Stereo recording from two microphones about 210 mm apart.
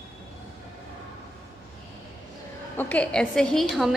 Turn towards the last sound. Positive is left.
turn(degrees=0)  # may be behind; listen again after turning